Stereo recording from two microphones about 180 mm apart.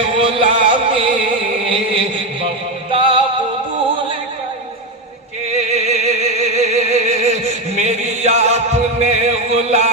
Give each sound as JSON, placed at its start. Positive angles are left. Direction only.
{"t": 0.2, "sound": "music", "side_deg": -30}
{"t": 1.6, "sound": "chant", "side_deg": -30}
{"t": 2.9, "sound": "music", "side_deg": -30}
{"t": 5.5, "sound": "music", "side_deg": -35}
{"t": 9.5, "sound": "a sound", "side_deg": -35}